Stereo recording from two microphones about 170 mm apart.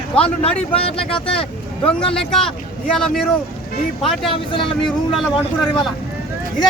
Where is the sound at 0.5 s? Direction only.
5° left (ahead or behind).